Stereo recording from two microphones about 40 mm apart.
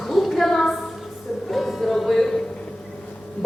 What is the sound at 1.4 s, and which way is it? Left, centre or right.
Music, centre.